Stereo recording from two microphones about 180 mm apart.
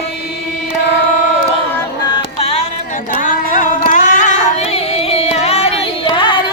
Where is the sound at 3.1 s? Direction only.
45° left (ahead or behind); by 6.4 s 25° left (ahead or behind).